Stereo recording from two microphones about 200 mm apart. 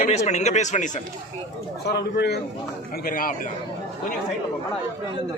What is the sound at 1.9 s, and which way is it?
A man's voice, 55° left (ahead or behind).